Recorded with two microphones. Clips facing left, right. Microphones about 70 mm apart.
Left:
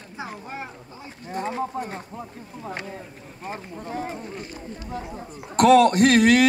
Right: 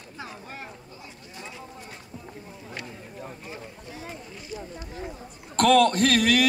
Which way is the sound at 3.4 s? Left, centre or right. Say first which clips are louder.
Left 6 dB; left.